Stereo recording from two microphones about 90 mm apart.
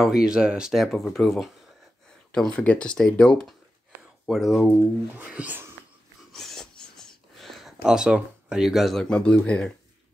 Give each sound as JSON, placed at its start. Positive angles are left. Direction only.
{"t": 0.0, "sound": "speech", "side_deg": -5}
{"t": 4.3, "sound": "speech", "side_deg": -5}
{"t": 5.1, "sound": "speech", "side_deg": -15}
{"t": 6.3, "sound": "a sound", "side_deg": 5}